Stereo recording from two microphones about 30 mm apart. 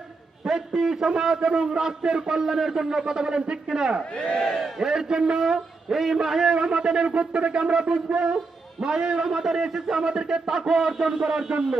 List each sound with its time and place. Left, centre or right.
0.4 s a man's voice: centre
2.0 s a man's voice: right
2.4 s a man's voice: centre
4.1 s speech: left
4.4 s a man's voice: centre
4.8 s a man's voice: centre
6.5 s a man's voice: right